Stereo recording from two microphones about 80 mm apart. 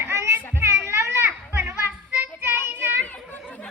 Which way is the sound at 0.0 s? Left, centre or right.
Right.